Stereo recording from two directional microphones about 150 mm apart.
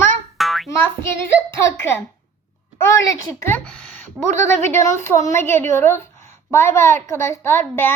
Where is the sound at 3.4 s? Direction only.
10° left (ahead or behind).